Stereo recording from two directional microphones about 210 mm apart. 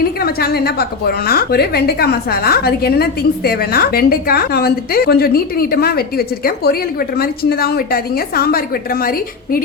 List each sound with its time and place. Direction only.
0.0 s a woman's voice: 45° left (ahead or behind)